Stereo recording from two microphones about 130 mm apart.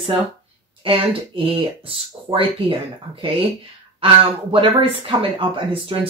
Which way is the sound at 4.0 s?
45° right (ahead or behind).